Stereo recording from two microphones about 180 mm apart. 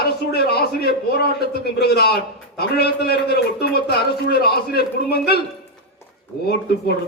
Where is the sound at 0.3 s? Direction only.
60° left (ahead or behind).